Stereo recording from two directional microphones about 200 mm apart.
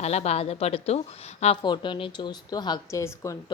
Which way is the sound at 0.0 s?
30° left (ahead or behind).